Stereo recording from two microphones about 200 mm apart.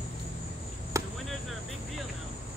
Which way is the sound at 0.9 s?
15° right (ahead or behind).